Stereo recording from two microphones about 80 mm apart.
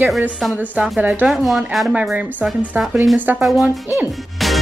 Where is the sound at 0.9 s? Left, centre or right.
Centre.